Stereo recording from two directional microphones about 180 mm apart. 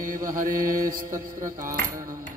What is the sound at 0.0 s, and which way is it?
Mantra, 50° right (ahead or behind).